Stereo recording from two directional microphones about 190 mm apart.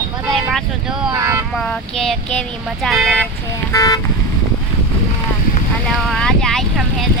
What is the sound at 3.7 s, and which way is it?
Speech, 20° left (ahead or behind).